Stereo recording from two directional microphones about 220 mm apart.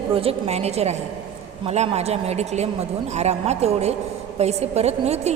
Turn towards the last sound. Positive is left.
turn(degrees=-30)  # may be behind; listen again after turning